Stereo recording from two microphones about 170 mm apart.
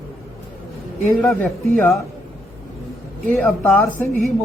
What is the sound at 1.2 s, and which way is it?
Speech, 5° left (ahead or behind).